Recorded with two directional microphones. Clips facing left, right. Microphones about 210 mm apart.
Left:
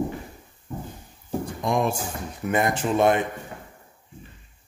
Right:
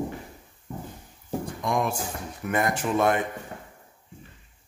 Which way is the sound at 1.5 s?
25° left (ahead or behind).